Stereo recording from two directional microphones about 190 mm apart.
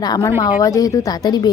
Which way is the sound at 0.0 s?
20° left (ahead or behind).